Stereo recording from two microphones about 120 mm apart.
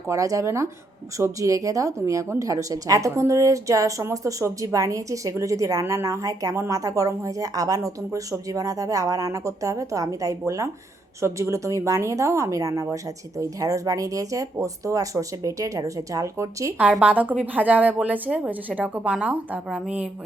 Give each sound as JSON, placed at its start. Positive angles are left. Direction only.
{"t": 0.1, "sound": "speech", "side_deg": -25}
{"t": 16.7, "sound": "a woman's voice", "side_deg": -10}